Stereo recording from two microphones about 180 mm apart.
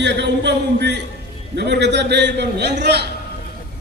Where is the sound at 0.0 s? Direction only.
70° right (ahead or behind).